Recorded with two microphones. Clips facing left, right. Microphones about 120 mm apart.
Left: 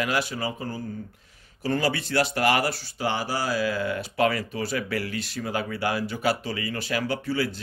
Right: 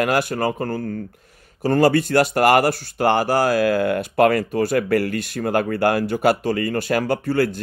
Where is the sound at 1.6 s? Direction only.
50° right (ahead or behind).